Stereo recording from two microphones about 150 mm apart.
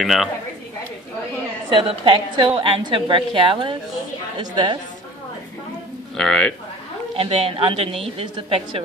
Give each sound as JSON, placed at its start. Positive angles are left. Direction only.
{"t": 0.0, "sound": "a man's voice", "side_deg": 0}
{"t": 1.7, "sound": "a woman's voice", "side_deg": -35}
{"t": 6.1, "sound": "a man's voice", "side_deg": 5}
{"t": 7.2, "sound": "a woman's voice", "side_deg": -40}